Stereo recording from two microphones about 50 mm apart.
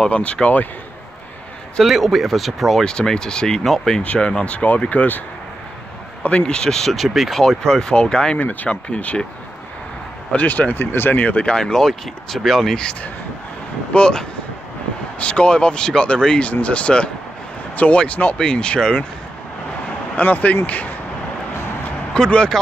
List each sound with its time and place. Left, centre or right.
0.1 s speech: left
1.8 s speech: centre
2.8 s speech: centre
4.0 s speech: left
6.4 s speech: centre
6.9 s speech: centre
7.4 s speech: centre
8.4 s speech: left
10.3 s speech: left
10.7 s speech: left
11.4 s speech: centre
12.7 s speech: centre
20.2 s speech: left
22.1 s speech: centre